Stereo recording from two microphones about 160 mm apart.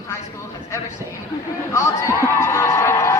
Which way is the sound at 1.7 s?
20° left (ahead or behind).